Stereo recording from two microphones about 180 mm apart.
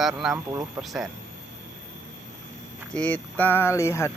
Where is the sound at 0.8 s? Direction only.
Centre (ahead or behind).